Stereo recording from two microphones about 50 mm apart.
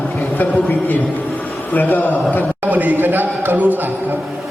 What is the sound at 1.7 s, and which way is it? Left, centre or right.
Speech, left.